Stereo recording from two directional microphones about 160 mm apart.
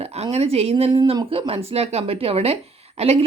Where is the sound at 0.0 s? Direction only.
40° right (ahead or behind).